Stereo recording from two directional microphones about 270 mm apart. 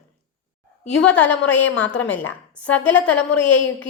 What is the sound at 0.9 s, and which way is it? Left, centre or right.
A woman's voice, centre.